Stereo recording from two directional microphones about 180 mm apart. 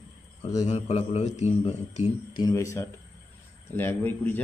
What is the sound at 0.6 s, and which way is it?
Speech, 40° left (ahead or behind).